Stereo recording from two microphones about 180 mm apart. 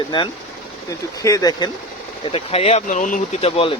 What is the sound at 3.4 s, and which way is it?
Speech, 30° left (ahead or behind).